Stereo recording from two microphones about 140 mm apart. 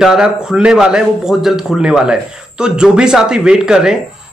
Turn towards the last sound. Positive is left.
turn(degrees=-5)  # may be behind; listen again after turning